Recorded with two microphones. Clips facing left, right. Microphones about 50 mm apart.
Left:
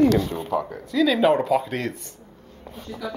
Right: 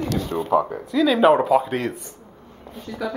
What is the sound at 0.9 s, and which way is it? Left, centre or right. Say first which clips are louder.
Speech: right 3 dB; centre.